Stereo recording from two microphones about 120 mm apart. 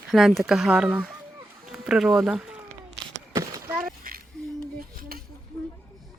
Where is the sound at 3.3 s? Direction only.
30° right (ahead or behind).